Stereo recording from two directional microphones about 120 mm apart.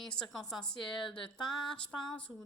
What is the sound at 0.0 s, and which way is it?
A woman's voice, 5° left (ahead or behind).